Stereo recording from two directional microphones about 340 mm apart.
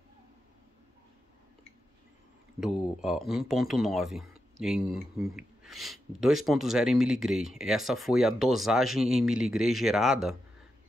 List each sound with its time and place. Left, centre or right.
2.6 s speech: centre